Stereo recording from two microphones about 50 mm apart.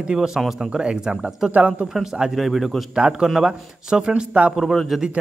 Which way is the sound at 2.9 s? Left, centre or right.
Centre.